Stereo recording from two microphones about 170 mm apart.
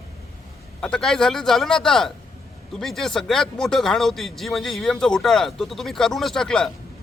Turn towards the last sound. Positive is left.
turn(degrees=5)  # may be behind; listen again after turning